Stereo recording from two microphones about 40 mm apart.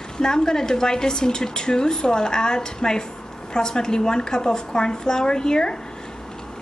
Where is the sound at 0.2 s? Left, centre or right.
Centre.